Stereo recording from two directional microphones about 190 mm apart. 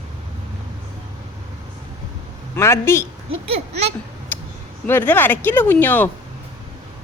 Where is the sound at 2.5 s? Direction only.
15° left (ahead or behind).